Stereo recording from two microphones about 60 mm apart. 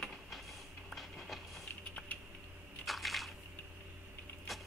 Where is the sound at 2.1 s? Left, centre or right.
Left.